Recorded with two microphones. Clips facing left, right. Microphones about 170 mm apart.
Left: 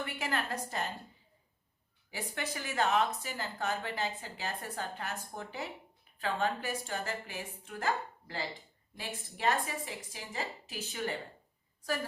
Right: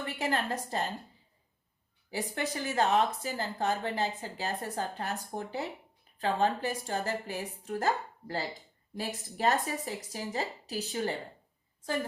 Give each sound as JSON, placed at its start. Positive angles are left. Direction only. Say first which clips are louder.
{"t": 0.0, "sound": "speech", "louder": "right 4 dB", "side_deg": -30}
{"t": 2.0, "sound": "speech", "louder": "right 5 dB", "side_deg": -35}